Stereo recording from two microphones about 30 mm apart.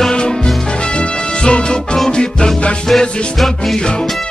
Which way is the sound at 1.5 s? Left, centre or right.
Left.